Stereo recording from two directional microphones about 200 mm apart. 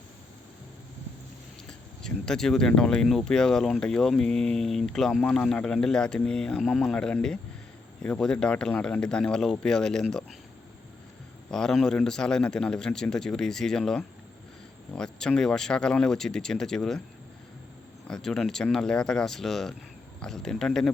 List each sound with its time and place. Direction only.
2.0 s speech: 5° left (ahead or behind)
11.5 s speech: centre (ahead or behind)
18.1 s speech: centre (ahead or behind)